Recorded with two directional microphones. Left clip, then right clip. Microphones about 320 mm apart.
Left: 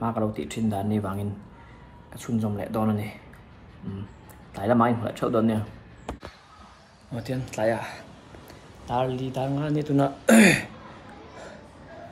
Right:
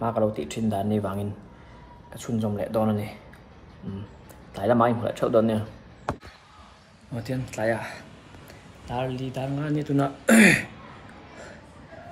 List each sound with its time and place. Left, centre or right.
0.0 s speech: centre
4.6 s speech: centre
7.2 s speech: centre